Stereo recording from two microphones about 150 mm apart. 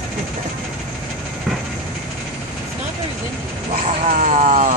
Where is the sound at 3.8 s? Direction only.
50° right (ahead or behind).